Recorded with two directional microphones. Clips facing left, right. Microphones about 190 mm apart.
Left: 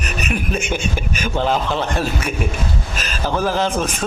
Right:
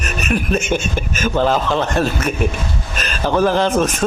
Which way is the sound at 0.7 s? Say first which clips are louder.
Right 3 dB; 10° left (ahead or behind).